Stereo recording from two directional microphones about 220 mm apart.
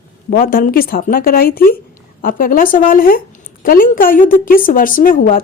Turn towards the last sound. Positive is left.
turn(degrees=40)  # may be behind; listen again after turning